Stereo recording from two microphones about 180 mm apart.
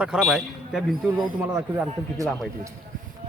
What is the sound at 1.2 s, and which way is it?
Speech, 15° right (ahead or behind).